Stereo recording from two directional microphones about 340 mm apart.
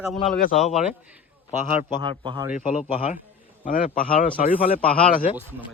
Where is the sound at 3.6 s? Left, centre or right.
Left.